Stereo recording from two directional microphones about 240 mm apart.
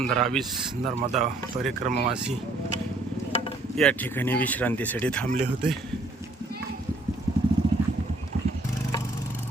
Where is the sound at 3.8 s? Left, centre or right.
Centre.